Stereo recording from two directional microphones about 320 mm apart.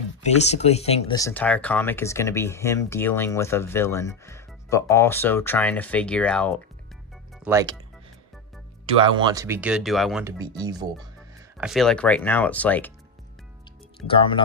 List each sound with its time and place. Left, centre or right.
0.2 s speech: left; by 7.8 s centre
9.1 s speech: centre
14.1 s speech: centre